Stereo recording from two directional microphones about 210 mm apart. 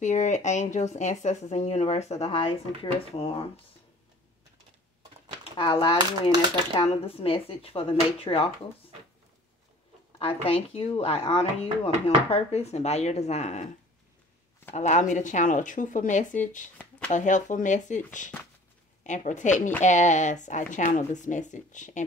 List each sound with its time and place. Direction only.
0.0 s speech: 35° left (ahead or behind)
5.4 s speech: 25° left (ahead or behind)
10.1 s speech: 25° left (ahead or behind)
14.8 s speech: 35° left (ahead or behind)